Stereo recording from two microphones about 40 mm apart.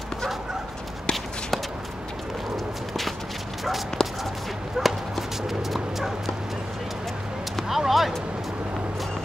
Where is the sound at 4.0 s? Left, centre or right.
Centre.